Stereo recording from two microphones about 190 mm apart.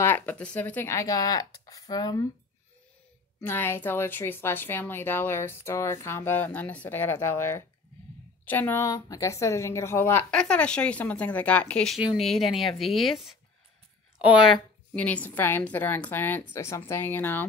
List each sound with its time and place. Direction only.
0.0 s a woman's voice: 10° left (ahead or behind)
3.3 s a woman's voice: 10° left (ahead or behind); by 14.6 s 5° right (ahead or behind)
15.0 s a woman's voice: 5° left (ahead or behind)